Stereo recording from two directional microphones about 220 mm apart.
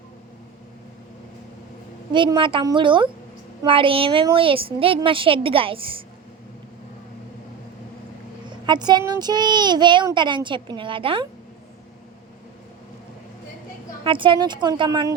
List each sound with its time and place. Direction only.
2.1 s a child's voice: 20° right (ahead or behind)
8.6 s a child's voice: 20° right (ahead or behind)
14.0 s a child's voice: 20° right (ahead or behind)